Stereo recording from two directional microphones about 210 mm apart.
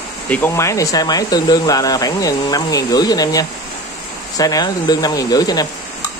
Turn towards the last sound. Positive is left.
turn(degrees=20)  # may be behind; listen again after turning